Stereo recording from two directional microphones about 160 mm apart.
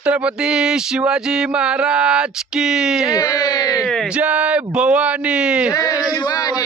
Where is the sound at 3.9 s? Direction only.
5° left (ahead or behind).